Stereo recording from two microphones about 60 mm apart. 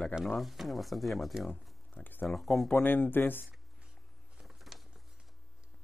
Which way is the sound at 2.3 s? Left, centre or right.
Centre.